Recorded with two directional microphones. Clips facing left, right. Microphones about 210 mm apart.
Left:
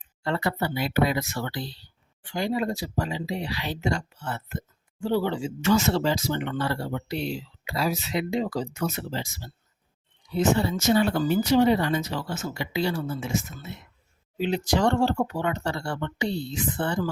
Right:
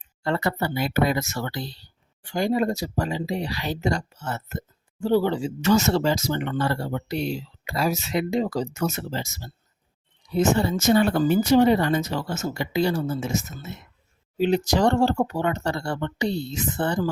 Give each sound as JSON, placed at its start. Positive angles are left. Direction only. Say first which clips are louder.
{"t": 0.2, "sound": "speech", "louder": "right 2 dB", "side_deg": -45}